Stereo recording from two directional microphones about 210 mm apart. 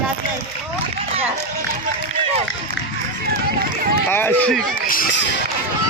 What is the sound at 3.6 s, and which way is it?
Run, 45° right (ahead or behind).